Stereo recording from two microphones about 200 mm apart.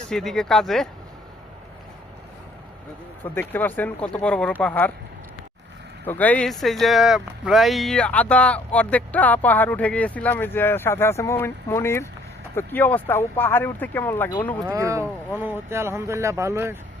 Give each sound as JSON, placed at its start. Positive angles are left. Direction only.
{"t": 0.1, "sound": "speech", "side_deg": 0}
{"t": 3.5, "sound": "speech", "side_deg": 10}
{"t": 6.1, "sound": "speech", "side_deg": 10}
{"t": 14.7, "sound": "speech", "side_deg": -15}